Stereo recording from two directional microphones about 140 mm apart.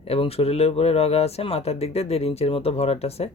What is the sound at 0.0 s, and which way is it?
Speech, 45° left (ahead or behind).